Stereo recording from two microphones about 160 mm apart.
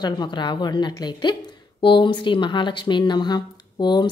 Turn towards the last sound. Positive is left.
turn(degrees=25)  # may be behind; listen again after turning